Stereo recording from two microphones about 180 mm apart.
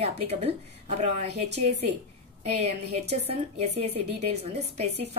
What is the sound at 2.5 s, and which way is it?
A woman's voice, 35° right (ahead or behind).